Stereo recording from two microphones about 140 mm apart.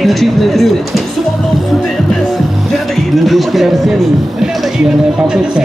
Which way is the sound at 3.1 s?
Centre (ahead or behind).